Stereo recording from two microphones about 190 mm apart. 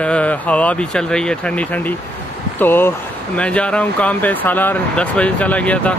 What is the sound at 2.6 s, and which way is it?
Speech, 10° left (ahead or behind).